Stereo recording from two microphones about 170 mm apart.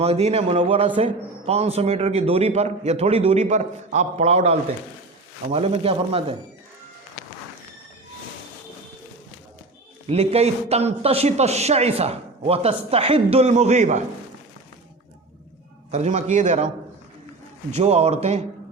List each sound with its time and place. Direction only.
0.0 s a man's voice: 40° right (ahead or behind)
10.1 s a man's voice: 40° right (ahead or behind)
15.9 s a man's voice: 45° right (ahead or behind)
17.7 s a man's voice: 35° right (ahead or behind)